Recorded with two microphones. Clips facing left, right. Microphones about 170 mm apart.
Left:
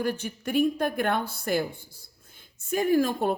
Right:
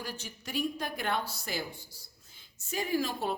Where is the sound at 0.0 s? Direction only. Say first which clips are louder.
Left 12 dB; 55° left (ahead or behind).